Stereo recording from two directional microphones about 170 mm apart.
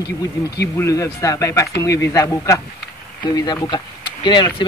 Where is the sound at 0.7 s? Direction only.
20° left (ahead or behind).